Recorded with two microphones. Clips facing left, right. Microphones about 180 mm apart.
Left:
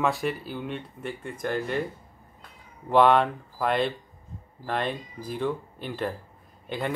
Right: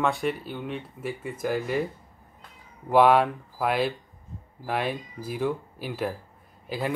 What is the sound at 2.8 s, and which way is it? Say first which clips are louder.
Speech: right 1 dB; 5° right (ahead or behind).